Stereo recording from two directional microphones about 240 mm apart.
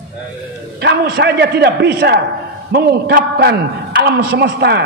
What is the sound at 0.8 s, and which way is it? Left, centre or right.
A man's voice, right.